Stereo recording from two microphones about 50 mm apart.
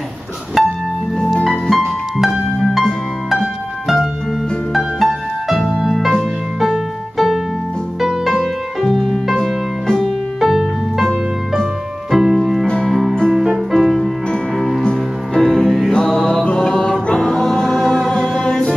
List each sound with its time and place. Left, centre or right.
0.6 s music: centre
1.1 s music: centre
4.7 s music: centre
8.8 s music: centre
10.0 s music: centre
12.6 s music: centre
13.3 s music: centre
14.8 s music: centre
16.1 s mantra: centre
17.1 s music: centre
18.4 s music: centre